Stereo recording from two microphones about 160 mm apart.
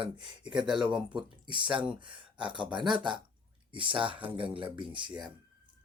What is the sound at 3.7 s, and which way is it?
Speech, 30° right (ahead or behind).